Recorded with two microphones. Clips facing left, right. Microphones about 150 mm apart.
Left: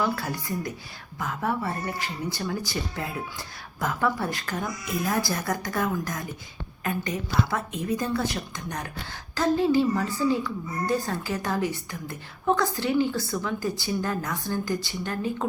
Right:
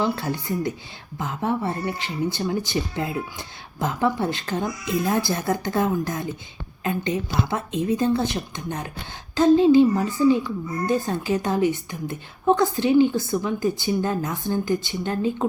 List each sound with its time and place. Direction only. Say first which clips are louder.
0.0 s speech: right 3 dB; 25° right (ahead or behind)